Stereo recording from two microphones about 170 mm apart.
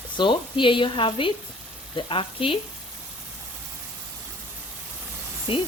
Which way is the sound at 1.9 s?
30° left (ahead or behind).